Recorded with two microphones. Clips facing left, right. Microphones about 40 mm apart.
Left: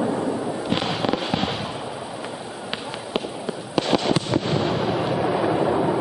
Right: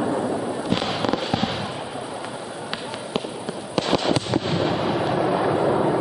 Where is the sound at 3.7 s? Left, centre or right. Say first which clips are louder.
Even; centre.